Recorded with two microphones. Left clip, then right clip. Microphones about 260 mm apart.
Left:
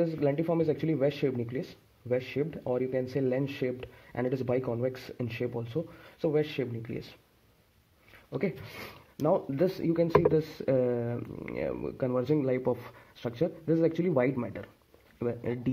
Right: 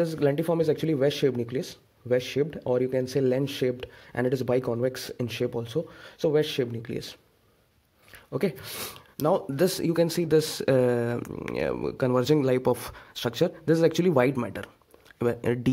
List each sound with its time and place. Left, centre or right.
0.0 s speech: right
8.3 s speech: right